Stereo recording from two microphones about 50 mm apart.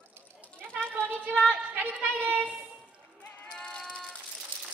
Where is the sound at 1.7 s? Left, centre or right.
Right.